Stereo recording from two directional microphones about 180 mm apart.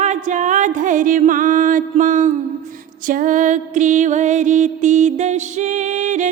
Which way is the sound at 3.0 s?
50° right (ahead or behind).